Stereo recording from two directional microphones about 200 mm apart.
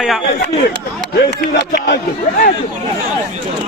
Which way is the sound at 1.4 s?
45° left (ahead or behind).